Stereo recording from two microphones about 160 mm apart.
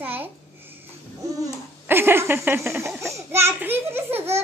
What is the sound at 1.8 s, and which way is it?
A child's voice, 15° right (ahead or behind).